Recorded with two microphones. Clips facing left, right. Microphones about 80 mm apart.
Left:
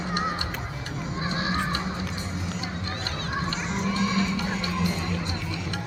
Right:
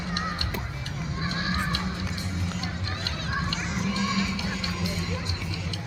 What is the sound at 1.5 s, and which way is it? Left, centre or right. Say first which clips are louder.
Music: left 2 dB; centre.